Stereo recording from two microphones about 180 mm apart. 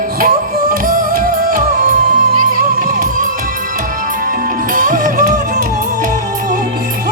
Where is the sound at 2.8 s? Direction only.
45° right (ahead or behind).